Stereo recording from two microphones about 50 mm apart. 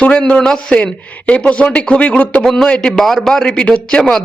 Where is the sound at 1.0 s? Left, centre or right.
Left.